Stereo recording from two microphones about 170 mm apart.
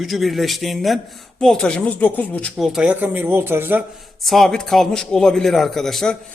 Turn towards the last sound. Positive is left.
turn(degrees=0)  # may be behind; listen again after turning